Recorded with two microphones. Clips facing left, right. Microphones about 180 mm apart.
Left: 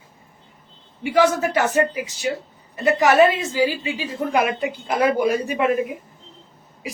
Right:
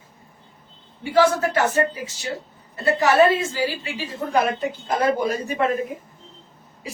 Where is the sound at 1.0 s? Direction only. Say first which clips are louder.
Even; 15° left (ahead or behind).